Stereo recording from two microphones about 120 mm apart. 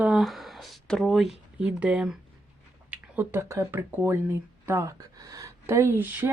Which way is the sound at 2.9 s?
20° right (ahead or behind).